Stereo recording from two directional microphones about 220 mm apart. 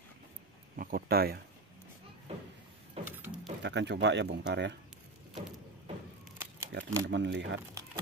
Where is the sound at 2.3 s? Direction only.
30° right (ahead or behind).